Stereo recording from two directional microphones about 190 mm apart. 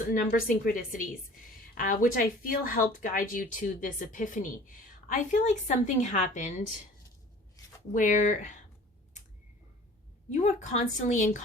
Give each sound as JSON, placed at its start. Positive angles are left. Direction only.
{"t": 0.1, "sound": "speech", "side_deg": 45}
{"t": 7.9, "sound": "speech", "side_deg": 40}
{"t": 10.3, "sound": "speech", "side_deg": 40}